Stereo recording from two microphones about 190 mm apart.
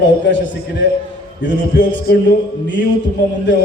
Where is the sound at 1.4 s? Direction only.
70° left (ahead or behind).